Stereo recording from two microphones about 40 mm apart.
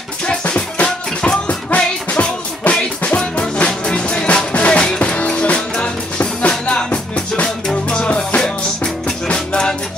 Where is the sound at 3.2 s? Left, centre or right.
Left.